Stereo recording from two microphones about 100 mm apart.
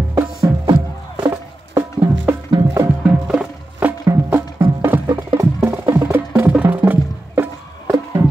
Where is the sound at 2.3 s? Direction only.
15° right (ahead or behind).